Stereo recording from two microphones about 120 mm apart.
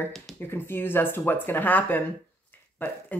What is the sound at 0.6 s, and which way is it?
Speech, 15° left (ahead or behind).